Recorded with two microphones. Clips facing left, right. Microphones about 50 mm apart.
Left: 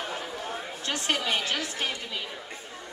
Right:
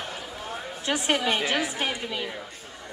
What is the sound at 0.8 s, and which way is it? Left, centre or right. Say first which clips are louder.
Speech: right 5 dB; centre.